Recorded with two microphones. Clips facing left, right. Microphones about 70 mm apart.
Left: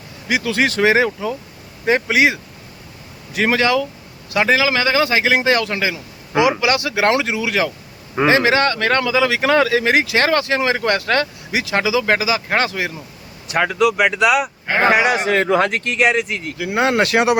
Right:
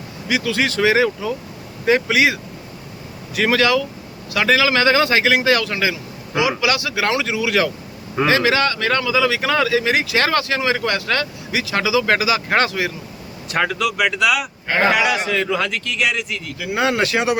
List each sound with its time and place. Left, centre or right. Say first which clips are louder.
0.3 s speech: left 2 dB; left; by 5.4 s centre
5.4 s speech: even; left; by 13.7 s centre
13.7 s speech: left 4 dB; left
15.3 s speech: left 5 dB; left